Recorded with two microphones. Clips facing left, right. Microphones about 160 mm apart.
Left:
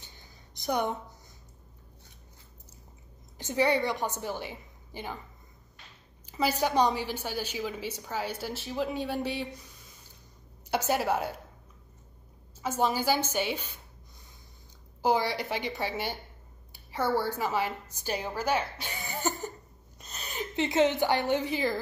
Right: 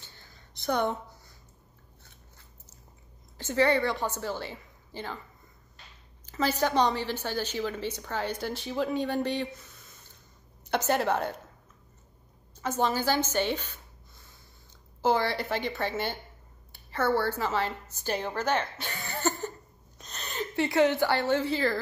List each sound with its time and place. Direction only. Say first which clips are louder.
0.0 s a sound: even; 15° left (ahead or behind)
3.3 s a woman's voice: right 2 dB; 15° left (ahead or behind)
6.2 s a woman's voice: right 1 dB; 10° left (ahead or behind)
12.6 s a woman's voice: even; 10° left (ahead or behind)
15.0 s a woman's voice: right 1 dB; 15° left (ahead or behind)
20.0 s a sound: right 2 dB; 5° left (ahead or behind)
20.5 s a woman's voice: right 1 dB; 20° left (ahead or behind)